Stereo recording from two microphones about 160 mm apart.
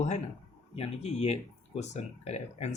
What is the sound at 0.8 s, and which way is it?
Speech, 40° left (ahead or behind).